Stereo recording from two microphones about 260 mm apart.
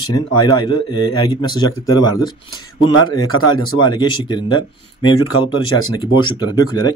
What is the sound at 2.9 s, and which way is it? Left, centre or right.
Speech, left.